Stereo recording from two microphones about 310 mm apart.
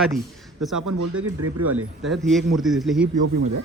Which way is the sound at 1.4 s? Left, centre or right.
Right.